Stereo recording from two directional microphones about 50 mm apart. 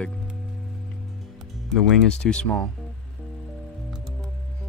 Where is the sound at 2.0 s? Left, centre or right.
Centre.